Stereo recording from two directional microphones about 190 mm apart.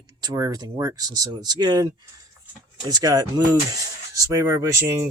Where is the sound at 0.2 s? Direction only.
20° right (ahead or behind).